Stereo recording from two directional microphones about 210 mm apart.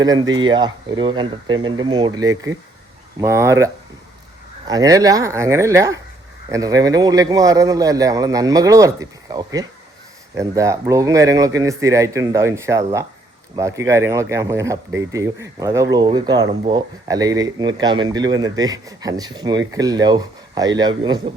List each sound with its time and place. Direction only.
0.0 s a man's voice: 20° right (ahead or behind)
4.7 s a man's voice: 15° right (ahead or behind)